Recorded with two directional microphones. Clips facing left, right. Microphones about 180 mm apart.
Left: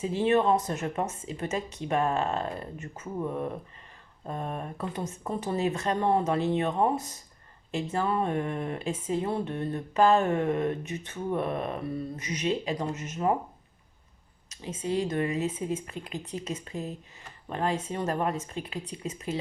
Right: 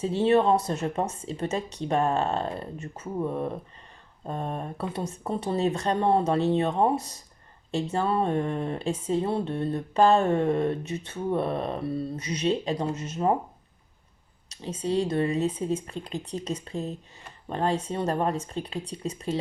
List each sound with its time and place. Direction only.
0.0 s speech: 35° right (ahead or behind)
3.2 s speech: 15° right (ahead or behind)
4.3 s speech: 30° right (ahead or behind)
14.5 s speech: 35° right (ahead or behind)